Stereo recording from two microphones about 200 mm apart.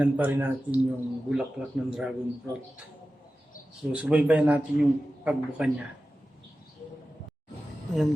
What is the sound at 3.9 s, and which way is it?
A man's voice, 5° right (ahead or behind).